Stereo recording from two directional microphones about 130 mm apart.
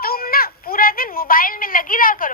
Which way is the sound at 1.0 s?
90° left.